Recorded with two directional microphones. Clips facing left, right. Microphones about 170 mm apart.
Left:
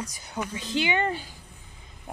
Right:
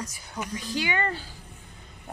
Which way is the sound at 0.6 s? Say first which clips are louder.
Left 3 dB; 25° left (ahead or behind).